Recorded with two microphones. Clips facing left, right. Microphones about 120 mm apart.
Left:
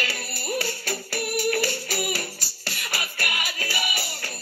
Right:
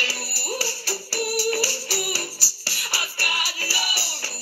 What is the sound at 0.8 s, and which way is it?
Music, 55° left (ahead or behind).